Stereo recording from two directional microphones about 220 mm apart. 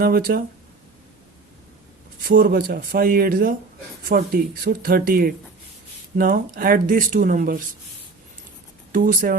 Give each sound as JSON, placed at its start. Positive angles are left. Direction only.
{"t": 0.0, "sound": "speech", "side_deg": -45}
{"t": 2.2, "sound": "speech", "side_deg": -40}
{"t": 8.9, "sound": "speech", "side_deg": -40}